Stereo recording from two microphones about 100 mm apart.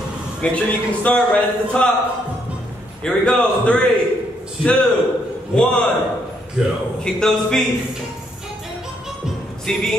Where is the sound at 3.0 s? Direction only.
10° left (ahead or behind).